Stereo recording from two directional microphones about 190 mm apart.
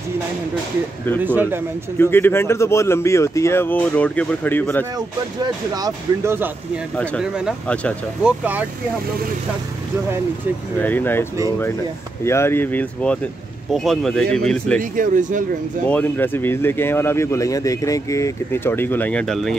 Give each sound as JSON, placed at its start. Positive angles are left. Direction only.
{"t": 1.2, "sound": "speech", "side_deg": -10}
{"t": 2.0, "sound": "speech", "side_deg": 10}
{"t": 4.9, "sound": "speech", "side_deg": -20}
{"t": 7.0, "sound": "speech", "side_deg": 5}
{"t": 8.2, "sound": "speech", "side_deg": -5}
{"t": 10.8, "sound": "speech", "side_deg": 10}
{"t": 12.3, "sound": "speech", "side_deg": 15}
{"t": 14.8, "sound": "speech", "side_deg": -45}
{"t": 15.9, "sound": "speech", "side_deg": 10}